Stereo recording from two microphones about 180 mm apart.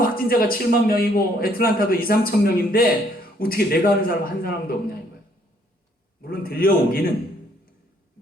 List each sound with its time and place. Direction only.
0.3 s a man's voice: 55° left (ahead or behind)
6.2 s a man's voice: 55° left (ahead or behind)